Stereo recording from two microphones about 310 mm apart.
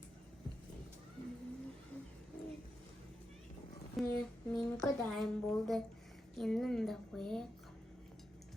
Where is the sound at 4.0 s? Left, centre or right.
Centre.